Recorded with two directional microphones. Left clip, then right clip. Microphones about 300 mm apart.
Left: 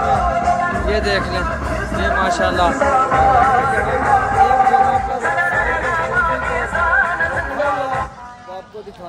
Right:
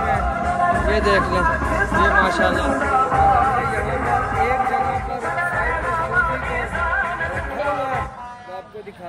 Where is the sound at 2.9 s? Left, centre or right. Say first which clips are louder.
Even; left.